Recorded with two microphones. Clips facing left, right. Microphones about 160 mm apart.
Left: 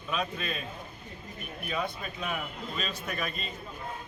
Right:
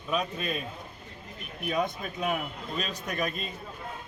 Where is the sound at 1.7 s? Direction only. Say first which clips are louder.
Right 4 dB; 40° right (ahead or behind).